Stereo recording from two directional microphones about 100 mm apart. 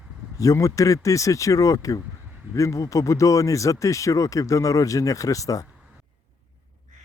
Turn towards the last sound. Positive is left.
turn(degrees=35)  # may be behind; listen again after turning